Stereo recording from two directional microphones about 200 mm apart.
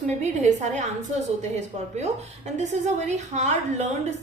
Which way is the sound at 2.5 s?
35° right (ahead or behind).